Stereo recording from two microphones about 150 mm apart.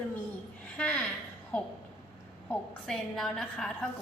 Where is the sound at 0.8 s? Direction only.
10° left (ahead or behind).